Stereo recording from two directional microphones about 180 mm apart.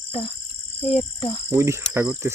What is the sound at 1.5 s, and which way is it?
Cricket, 15° right (ahead or behind).